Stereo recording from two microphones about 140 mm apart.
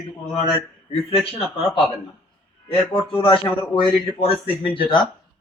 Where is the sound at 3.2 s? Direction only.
40° left (ahead or behind).